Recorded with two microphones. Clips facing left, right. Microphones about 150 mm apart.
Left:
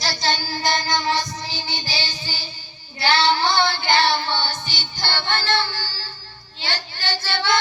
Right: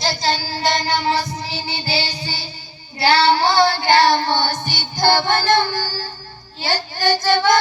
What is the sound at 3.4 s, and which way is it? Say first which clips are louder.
Child singing: right 5 dB; 40° right (ahead or behind).